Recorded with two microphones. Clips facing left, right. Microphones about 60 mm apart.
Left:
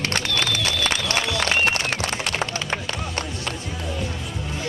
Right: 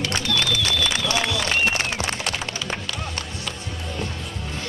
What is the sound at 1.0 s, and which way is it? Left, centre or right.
Applause, left.